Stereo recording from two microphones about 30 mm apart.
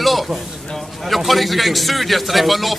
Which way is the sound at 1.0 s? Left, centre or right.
Centre.